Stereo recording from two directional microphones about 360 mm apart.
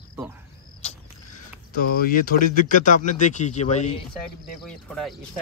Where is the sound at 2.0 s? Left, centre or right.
Left.